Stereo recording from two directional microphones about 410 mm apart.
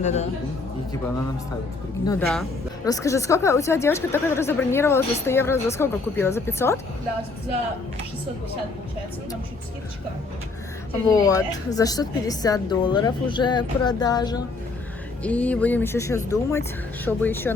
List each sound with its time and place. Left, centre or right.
0.0 s speech: centre
2.0 s speech: centre
11.1 s speech: centre